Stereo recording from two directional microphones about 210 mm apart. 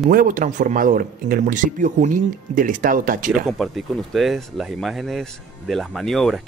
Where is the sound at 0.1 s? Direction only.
40° right (ahead or behind).